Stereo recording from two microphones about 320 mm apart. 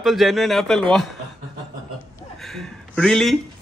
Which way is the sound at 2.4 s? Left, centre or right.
Centre.